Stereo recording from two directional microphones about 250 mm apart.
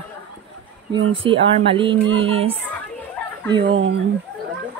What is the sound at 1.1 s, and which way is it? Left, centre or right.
Speech, right.